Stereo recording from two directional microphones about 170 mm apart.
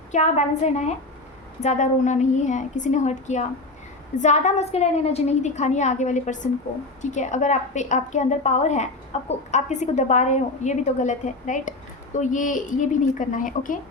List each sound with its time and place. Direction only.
0.1 s a woman's voice: 40° left (ahead or behind)